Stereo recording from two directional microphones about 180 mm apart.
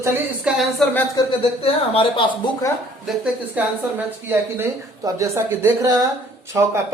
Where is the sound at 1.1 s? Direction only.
30° left (ahead or behind).